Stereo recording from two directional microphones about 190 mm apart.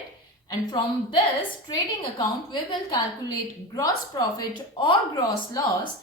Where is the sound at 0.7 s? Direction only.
25° left (ahead or behind).